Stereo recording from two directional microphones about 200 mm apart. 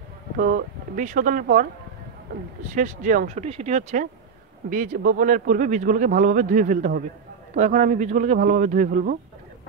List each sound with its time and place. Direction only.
0.4 s speech: 45° right (ahead or behind)
2.7 s speech: 40° right (ahead or behind)